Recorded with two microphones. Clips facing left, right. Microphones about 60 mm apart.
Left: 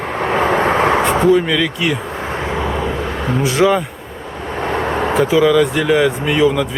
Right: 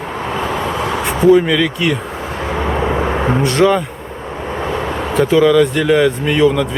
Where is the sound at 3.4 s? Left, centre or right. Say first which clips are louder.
Even; centre.